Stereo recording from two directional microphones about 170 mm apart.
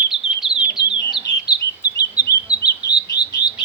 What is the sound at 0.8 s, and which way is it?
Bird, 90° left.